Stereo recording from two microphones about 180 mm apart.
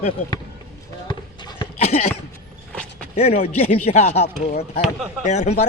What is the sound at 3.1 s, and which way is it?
Speech, 35° left (ahead or behind).